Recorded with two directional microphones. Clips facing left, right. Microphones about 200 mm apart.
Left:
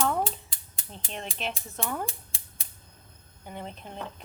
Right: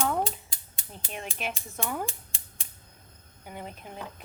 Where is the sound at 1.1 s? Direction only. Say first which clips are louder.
Even; 10° right (ahead or behind).